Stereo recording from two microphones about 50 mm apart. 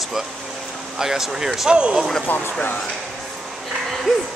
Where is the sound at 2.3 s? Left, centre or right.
Left.